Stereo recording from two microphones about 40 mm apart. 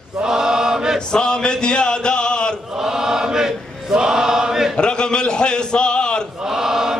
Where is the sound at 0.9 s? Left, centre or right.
Centre.